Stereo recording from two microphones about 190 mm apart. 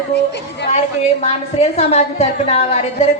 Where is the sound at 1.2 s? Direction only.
35° left (ahead or behind).